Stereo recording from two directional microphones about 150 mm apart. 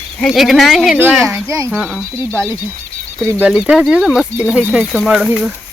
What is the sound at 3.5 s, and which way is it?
Speech, 5° right (ahead or behind).